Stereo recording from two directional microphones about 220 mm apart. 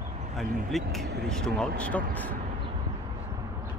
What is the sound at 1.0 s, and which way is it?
Speech, 45° right (ahead or behind).